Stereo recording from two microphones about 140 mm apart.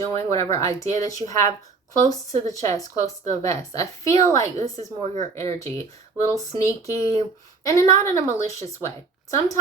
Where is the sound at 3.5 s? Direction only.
50° right (ahead or behind).